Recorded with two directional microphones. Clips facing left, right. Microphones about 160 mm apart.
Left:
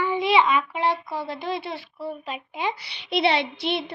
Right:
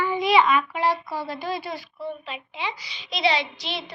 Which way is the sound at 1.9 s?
5° left (ahead or behind).